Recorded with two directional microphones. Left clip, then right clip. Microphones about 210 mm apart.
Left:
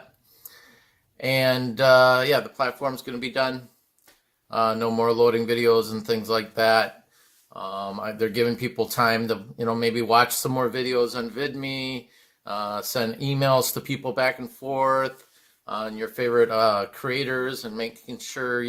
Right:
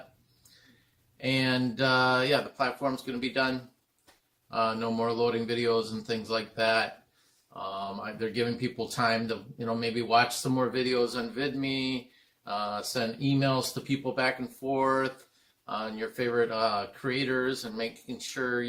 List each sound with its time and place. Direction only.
1.2 s speech: 35° left (ahead or behind)
4.5 s speech: 35° left (ahead or behind)